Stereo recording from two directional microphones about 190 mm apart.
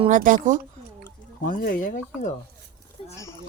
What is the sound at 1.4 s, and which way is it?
Speech, 50° left (ahead or behind).